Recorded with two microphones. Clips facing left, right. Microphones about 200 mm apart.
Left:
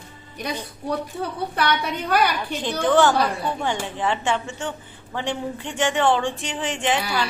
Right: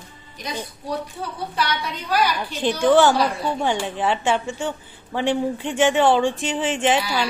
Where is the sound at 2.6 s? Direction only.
15° right (ahead or behind).